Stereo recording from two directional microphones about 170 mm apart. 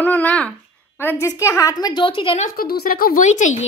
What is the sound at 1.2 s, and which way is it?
A woman's voice, 15° left (ahead or behind).